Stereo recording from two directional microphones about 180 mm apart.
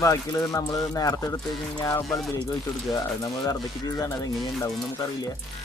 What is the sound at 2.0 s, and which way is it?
Speech, centre (ahead or behind).